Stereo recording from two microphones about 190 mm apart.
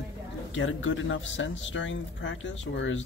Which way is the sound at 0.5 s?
90° left.